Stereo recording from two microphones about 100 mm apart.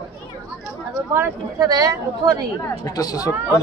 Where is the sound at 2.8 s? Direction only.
40° left (ahead or behind).